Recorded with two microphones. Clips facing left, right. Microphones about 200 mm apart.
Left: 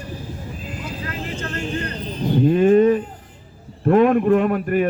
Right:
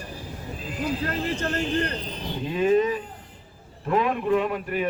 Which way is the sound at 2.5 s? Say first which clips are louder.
Left 7 dB; 50° left (ahead or behind).